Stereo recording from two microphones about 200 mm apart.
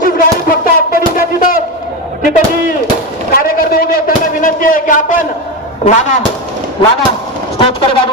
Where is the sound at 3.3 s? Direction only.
45° left (ahead or behind).